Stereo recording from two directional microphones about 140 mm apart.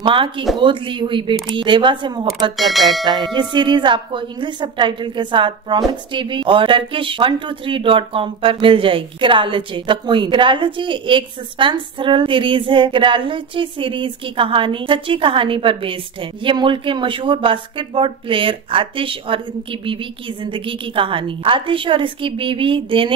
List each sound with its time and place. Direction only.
0.0 s a woman's voice: 35° right (ahead or behind)
2.5 s speech: centre (ahead or behind)
3.3 s a woman's voice: 35° right (ahead or behind)